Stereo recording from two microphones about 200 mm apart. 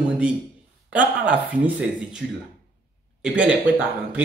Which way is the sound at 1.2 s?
5° right (ahead or behind).